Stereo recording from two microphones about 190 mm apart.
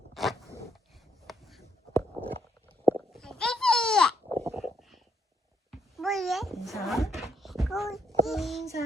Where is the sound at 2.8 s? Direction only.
Centre (ahead or behind).